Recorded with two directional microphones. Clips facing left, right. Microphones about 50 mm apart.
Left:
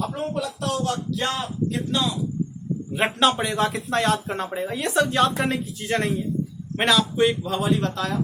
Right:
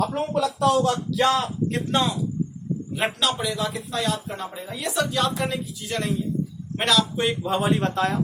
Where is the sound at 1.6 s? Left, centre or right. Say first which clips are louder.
Left 2 dB; right.